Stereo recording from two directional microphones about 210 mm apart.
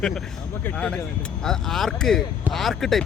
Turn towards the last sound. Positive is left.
turn(degrees=0)  # may be behind; listen again after turning